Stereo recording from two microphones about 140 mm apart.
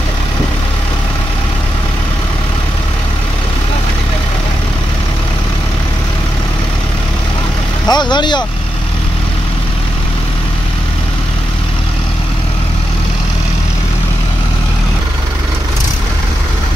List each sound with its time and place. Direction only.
7.8 s speech: 30° left (ahead or behind)